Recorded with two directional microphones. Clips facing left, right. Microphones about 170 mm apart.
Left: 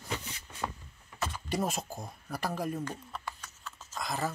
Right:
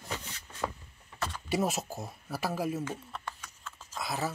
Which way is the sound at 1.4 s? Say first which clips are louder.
Right 3 dB; 5° right (ahead or behind).